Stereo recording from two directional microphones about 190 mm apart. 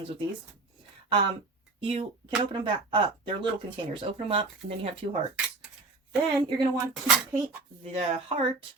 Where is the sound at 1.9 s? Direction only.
30° right (ahead or behind).